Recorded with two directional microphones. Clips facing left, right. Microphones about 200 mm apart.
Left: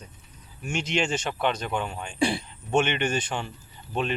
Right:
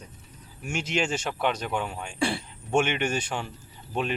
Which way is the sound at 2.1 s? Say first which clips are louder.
Left 3 dB; 15° left (ahead or behind).